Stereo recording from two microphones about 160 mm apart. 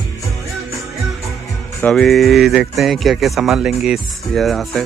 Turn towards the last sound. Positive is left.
turn(degrees=0)  # may be behind; listen again after turning